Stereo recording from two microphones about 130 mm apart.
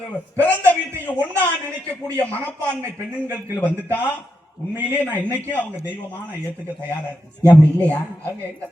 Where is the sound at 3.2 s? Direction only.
20° right (ahead or behind).